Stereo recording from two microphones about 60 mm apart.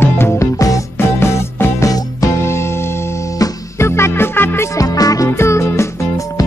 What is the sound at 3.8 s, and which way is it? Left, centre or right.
Music, left.